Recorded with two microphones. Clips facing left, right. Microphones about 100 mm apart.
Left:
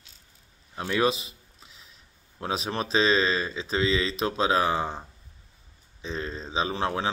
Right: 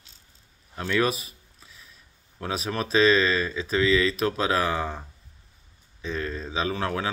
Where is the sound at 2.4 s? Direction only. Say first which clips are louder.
Even; 30° left (ahead or behind).